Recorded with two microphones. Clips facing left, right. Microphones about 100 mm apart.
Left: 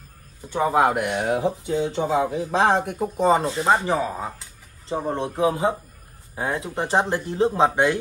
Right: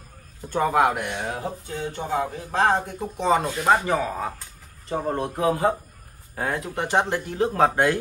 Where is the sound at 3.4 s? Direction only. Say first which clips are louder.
Even; 25° left (ahead or behind).